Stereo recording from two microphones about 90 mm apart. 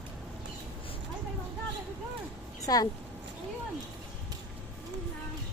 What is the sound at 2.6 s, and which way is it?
Speech, 45° left (ahead or behind).